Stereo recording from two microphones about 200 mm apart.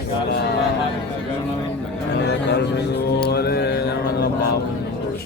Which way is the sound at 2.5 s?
55° left (ahead or behind).